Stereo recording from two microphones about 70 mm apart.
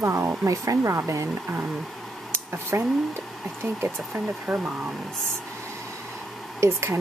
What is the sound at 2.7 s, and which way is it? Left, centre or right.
Speech, right.